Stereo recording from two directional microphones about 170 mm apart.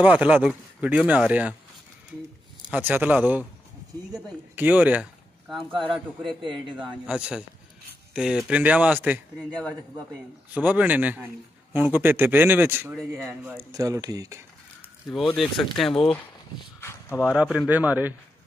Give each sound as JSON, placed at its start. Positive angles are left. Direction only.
{"t": 0.0, "sound": "speech", "side_deg": -10}
{"t": 2.7, "sound": "speech", "side_deg": -10}
{"t": 5.7, "sound": "a man's voice", "side_deg": -30}
{"t": 7.1, "sound": "speech", "side_deg": -5}
{"t": 10.5, "sound": "speech", "side_deg": -10}
{"t": 12.9, "sound": "speech", "side_deg": 0}
{"t": 15.0, "sound": "speech", "side_deg": 0}
{"t": 17.2, "sound": "speech", "side_deg": -5}